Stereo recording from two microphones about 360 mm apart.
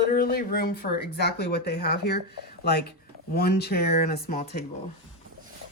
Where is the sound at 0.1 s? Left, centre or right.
Left.